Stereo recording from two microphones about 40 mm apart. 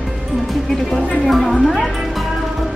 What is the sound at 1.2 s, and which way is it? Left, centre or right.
Speech, centre.